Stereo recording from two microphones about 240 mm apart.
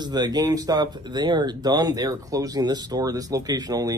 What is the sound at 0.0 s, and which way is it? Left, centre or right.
A man's voice, centre.